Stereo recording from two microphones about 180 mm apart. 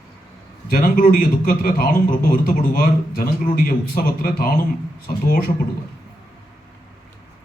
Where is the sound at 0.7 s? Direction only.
50° left (ahead or behind).